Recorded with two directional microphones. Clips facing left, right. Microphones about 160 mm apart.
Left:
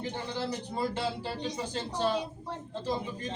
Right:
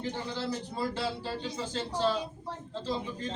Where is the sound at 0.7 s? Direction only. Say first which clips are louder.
Left 1 dB; 20° left (ahead or behind).